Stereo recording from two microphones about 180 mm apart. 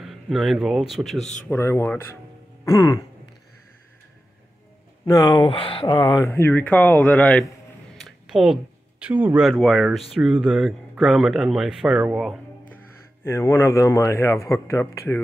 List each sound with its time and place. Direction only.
0.0 s a man's voice: centre (ahead or behind)
1.5 s speech: 15° left (ahead or behind)
2.6 s music: 20° left (ahead or behind)
5.0 s speech: 20° left (ahead or behind)
8.0 s a sound: centre (ahead or behind)
9.0 s speech: 10° right (ahead or behind)
9.5 s speech: 5° left (ahead or behind)
12.7 s speech: 15° left (ahead or behind)